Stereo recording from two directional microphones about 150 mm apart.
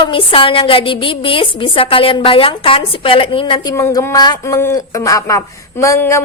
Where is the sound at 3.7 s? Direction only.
20° left (ahead or behind).